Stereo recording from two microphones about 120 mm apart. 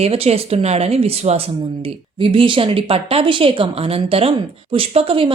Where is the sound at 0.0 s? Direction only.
55° right (ahead or behind).